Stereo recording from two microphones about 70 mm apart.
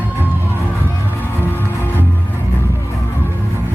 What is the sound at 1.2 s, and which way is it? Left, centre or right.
Music, left.